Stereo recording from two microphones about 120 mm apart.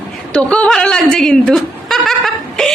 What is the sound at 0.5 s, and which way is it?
Speech, 10° left (ahead or behind).